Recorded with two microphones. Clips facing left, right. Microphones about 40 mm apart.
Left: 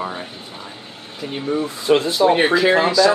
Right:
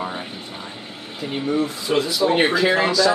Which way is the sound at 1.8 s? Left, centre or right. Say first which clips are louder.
Left 9 dB; left.